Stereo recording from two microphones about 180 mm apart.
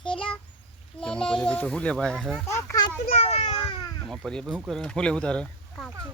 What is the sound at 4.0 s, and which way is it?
Speech, 5° left (ahead or behind).